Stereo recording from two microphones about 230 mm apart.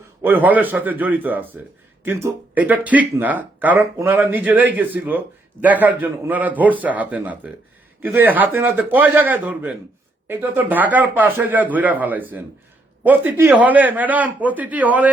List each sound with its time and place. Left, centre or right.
0.2 s speech: centre